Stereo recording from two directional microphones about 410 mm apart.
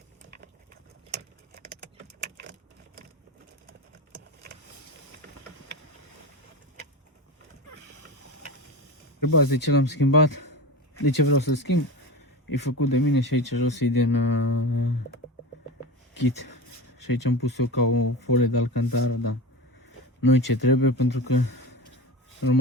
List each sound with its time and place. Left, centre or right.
2.2 s a sound: right
9.2 s speech: left
16.1 s speech: left